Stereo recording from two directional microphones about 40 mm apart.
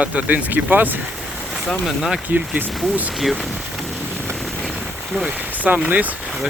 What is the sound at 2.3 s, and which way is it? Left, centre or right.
Speech, right.